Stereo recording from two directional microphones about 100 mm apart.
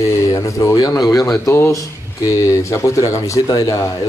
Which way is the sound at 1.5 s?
25° left (ahead or behind).